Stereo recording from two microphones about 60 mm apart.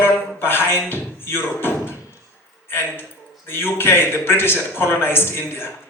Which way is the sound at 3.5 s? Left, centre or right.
Left.